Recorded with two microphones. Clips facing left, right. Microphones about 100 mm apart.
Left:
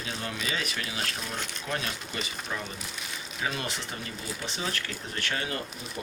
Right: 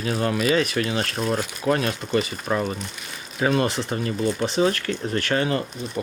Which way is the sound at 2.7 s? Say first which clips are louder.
Right 4 dB; centre (ahead or behind).